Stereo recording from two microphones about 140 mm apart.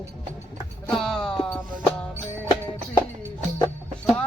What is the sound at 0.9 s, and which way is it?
Music, 5° left (ahead or behind).